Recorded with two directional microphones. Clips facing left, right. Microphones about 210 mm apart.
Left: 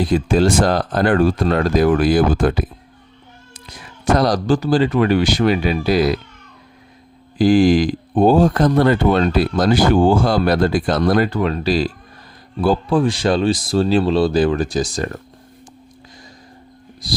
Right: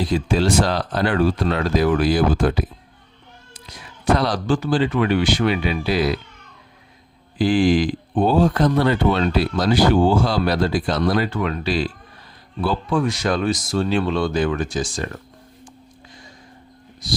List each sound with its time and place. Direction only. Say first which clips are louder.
0.0 s speech: left 4 dB; 50° left (ahead or behind)
4.0 s speech: left 3 dB; 45° left (ahead or behind)
7.3 s speech: left 4 dB; 45° left (ahead or behind)
17.0 s speech: left 1 dB; 35° left (ahead or behind)